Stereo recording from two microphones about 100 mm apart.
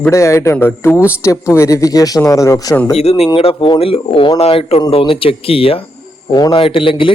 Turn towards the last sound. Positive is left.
turn(degrees=60)  # may be behind; listen again after turning